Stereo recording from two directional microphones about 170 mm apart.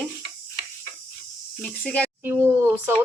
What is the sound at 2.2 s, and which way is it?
Speech, 10° right (ahead or behind).